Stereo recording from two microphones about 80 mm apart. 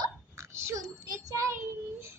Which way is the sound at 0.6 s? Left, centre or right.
Right.